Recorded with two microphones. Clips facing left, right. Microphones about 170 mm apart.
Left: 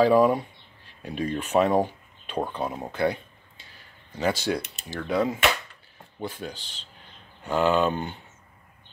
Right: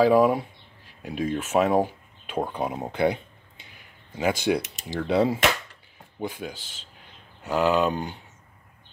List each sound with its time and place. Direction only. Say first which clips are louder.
0.0 s speech: even; 5° right (ahead or behind)
2.6 s a sound: right 3 dB; 20° right (ahead or behind)
4.1 s speech: right 2 dB; 10° right (ahead or behind)
5.0 s speech: right 3 dB; 30° right (ahead or behind)
6.1 s speech: right 2 dB; 10° right (ahead or behind)